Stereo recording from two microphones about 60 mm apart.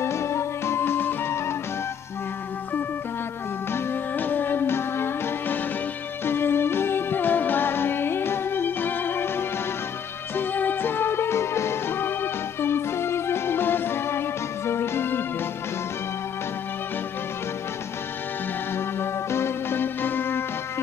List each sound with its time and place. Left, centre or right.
0.0 s music: left
3.7 s music: left
18.8 s music: left